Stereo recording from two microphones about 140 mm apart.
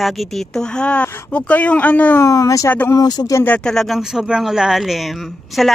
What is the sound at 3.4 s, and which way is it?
Speech, 5° left (ahead or behind).